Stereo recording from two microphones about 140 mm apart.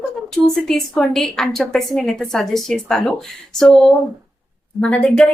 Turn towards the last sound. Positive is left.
turn(degrees=5)  # may be behind; listen again after turning